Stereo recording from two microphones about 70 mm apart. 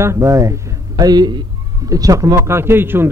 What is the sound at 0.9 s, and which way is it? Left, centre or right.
Speech, right.